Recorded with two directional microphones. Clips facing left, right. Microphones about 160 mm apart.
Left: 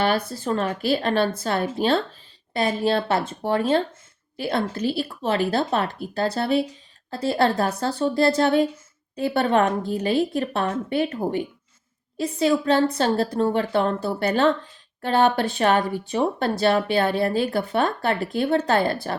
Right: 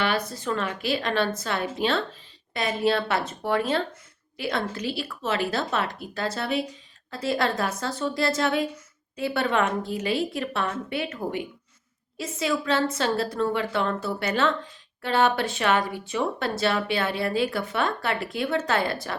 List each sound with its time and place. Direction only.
0.3 s speech: 30° left (ahead or behind)
17.5 s speech: 35° left (ahead or behind)